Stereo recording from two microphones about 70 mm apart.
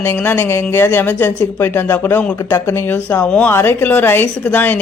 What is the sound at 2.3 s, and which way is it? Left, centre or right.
Speech, left.